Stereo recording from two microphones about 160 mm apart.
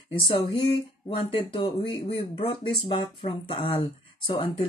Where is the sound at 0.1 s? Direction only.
35° left (ahead or behind).